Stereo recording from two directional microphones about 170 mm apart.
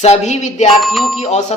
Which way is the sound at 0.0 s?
40° left (ahead or behind).